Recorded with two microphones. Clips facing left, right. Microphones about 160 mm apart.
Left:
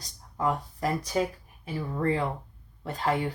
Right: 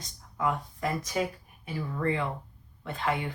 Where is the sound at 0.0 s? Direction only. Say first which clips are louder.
Left 1 dB; 35° left (ahead or behind).